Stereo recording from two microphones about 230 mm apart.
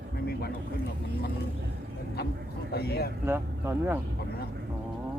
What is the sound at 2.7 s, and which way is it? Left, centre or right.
Speech, left.